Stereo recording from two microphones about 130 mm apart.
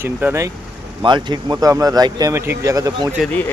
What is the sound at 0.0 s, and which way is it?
Speech, 15° right (ahead or behind).